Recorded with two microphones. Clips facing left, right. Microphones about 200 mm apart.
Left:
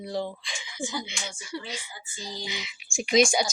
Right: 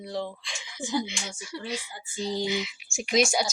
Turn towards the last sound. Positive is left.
turn(degrees=-5)  # may be behind; listen again after turning